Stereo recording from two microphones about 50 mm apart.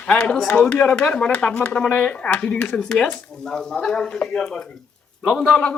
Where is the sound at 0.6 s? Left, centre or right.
Left.